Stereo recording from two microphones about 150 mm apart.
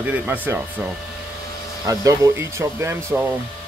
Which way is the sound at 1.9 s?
20° right (ahead or behind).